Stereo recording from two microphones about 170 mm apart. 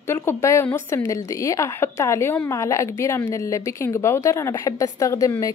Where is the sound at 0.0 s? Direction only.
15° left (ahead or behind).